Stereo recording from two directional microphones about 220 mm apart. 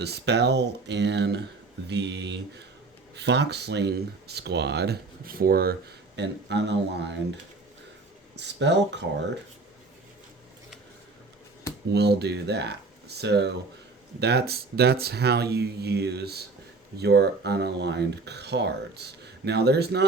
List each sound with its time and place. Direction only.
0.0 s speech: 50° right (ahead or behind)
8.4 s speech: 50° right (ahead or behind)
11.9 s speech: 50° right (ahead or behind)